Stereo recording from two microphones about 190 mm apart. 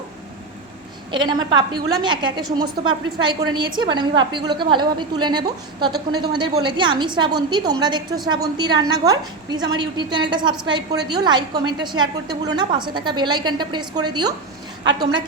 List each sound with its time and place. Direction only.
1.1 s a woman's voice: 25° right (ahead or behind)
14.8 s a woman's voice: 70° right (ahead or behind)